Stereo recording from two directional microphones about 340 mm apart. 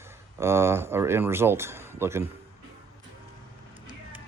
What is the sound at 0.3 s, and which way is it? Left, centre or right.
Speech, centre.